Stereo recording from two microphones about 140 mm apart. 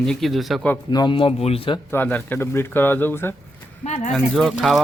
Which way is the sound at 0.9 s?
35° left (ahead or behind).